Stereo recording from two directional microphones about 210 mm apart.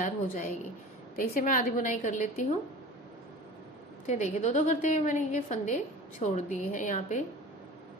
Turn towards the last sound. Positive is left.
turn(degrees=35)  # may be behind; listen again after turning